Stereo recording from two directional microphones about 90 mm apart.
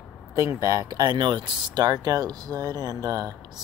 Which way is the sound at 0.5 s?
35° right (ahead or behind).